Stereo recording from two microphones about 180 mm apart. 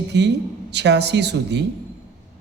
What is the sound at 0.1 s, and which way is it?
A man's voice, 70° right (ahead or behind).